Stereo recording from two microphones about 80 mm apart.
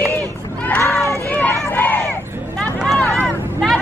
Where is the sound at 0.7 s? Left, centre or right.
Left.